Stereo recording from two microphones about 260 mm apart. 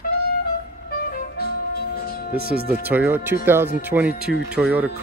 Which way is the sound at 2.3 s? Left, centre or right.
Right.